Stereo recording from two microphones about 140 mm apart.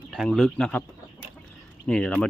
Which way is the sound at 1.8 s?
5° left (ahead or behind).